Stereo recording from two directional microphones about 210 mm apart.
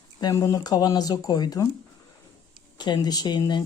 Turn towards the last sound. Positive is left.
turn(degrees=20)  # may be behind; listen again after turning